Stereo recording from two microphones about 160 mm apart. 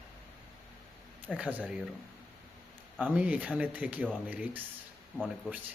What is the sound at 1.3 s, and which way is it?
Speech, 10° right (ahead or behind).